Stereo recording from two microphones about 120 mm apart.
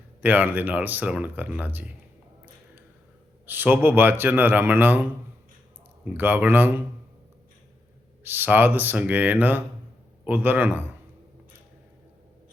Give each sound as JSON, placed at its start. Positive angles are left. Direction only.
{"t": 0.2, "sound": "speech", "side_deg": -15}
{"t": 3.4, "sound": "speech", "side_deg": -15}
{"t": 6.1, "sound": "speech", "side_deg": -15}
{"t": 8.2, "sound": "speech", "side_deg": -15}